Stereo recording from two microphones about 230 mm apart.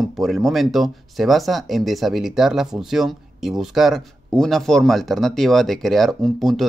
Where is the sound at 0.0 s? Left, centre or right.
Centre.